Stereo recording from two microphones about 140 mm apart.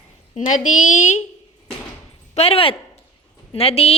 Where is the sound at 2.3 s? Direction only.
45° left (ahead or behind).